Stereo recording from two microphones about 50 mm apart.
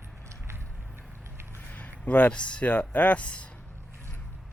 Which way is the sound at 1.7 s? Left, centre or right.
Left.